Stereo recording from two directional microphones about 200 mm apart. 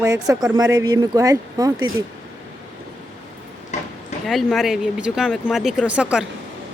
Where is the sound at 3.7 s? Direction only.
35° left (ahead or behind).